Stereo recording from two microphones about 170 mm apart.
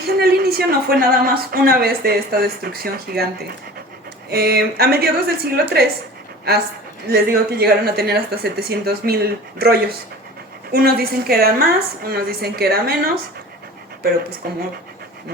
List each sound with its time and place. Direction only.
0.1 s a woman's voice: 65° right (ahead or behind)
4.3 s a woman's voice: 70° right (ahead or behind)
7.1 s a woman's voice: 65° right (ahead or behind)
14.4 s a woman's voice: 60° right (ahead or behind)